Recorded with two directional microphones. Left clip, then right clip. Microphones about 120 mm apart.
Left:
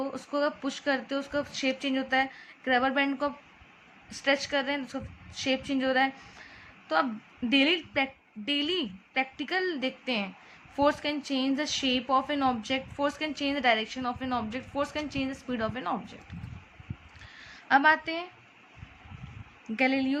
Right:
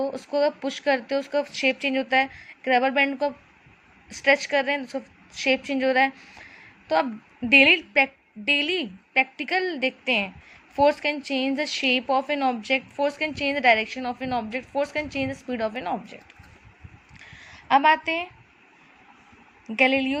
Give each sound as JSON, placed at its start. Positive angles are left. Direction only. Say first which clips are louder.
{"t": 0.0, "sound": "a woman's voice", "louder": "right 6 dB", "side_deg": -30}
{"t": 17.7, "sound": "a woman's voice", "louder": "right 4 dB", "side_deg": -30}
{"t": 19.7, "sound": "a woman's voice", "louder": "right 6 dB", "side_deg": -30}